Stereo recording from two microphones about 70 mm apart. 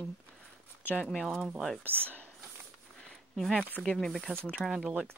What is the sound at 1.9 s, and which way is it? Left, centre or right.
Speech, right.